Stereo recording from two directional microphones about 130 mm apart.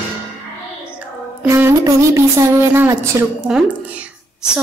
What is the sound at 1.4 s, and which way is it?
A woman's voice, 20° right (ahead or behind).